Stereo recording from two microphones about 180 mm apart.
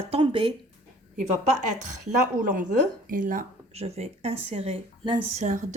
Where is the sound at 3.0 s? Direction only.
50° right (ahead or behind).